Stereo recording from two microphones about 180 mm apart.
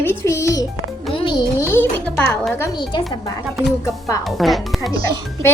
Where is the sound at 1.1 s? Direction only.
30° left (ahead or behind).